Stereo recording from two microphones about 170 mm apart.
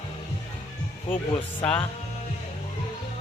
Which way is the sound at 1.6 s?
10° left (ahead or behind).